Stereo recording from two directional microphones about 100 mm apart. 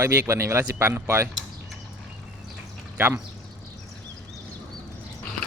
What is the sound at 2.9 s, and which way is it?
Speech, 20° right (ahead or behind).